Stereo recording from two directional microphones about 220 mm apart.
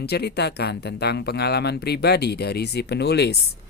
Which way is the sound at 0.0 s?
50° left (ahead or behind).